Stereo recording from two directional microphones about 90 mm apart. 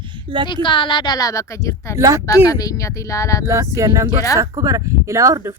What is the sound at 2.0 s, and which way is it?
Speech, 35° right (ahead or behind).